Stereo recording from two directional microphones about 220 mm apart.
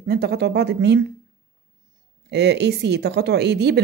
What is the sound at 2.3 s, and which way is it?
Speech, 50° right (ahead or behind).